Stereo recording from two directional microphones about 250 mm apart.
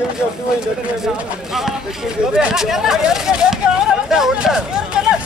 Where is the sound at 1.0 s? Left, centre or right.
Centre.